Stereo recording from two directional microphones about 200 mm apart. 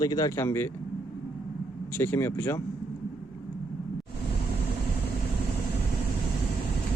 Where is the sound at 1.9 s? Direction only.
10° left (ahead or behind).